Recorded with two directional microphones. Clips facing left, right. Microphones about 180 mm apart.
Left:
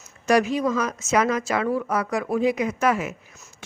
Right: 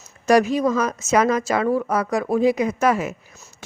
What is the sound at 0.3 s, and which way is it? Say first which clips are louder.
A woman's voice: right 3 dB; 40° right (ahead or behind).